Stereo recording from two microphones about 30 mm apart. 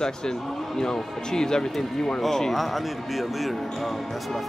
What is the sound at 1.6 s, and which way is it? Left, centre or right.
Speech, centre.